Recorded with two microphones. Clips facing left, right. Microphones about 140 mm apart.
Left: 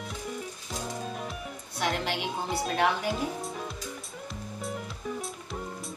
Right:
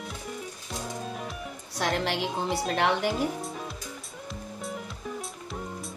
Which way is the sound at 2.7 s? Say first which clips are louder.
Right 1 dB; 75° right (ahead or behind).